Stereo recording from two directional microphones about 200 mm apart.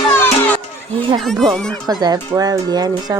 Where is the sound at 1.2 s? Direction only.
Centre (ahead or behind).